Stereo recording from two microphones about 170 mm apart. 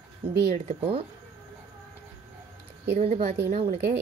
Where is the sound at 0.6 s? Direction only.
35° right (ahead or behind).